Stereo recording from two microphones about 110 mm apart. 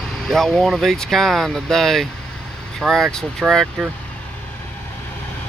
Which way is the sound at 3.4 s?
10° right (ahead or behind).